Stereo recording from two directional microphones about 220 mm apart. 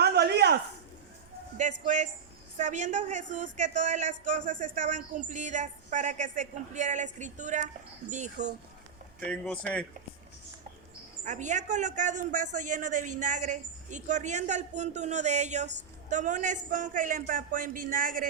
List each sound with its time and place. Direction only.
0.0 s a sound: 45° right (ahead or behind)
1.8 s a man's voice: 35° right (ahead or behind)
9.3 s speech: 5° left (ahead or behind)
11.3 s a man's voice: 35° right (ahead or behind)